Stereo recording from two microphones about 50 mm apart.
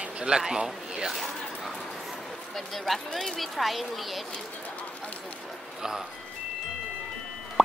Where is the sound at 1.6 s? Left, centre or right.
Centre.